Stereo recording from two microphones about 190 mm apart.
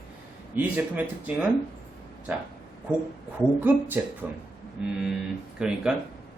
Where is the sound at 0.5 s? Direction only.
10° right (ahead or behind).